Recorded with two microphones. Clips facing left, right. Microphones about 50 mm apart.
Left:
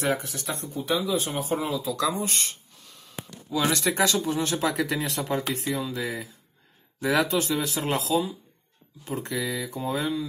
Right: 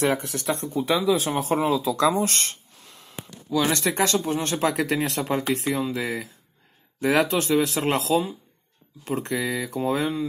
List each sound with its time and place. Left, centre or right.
0.0 s speech: right
0.9 s speech: right
1.4 s speech: right
2.0 s speech: right
3.9 s speech: right
4.7 s speech: right
9.8 s speech: right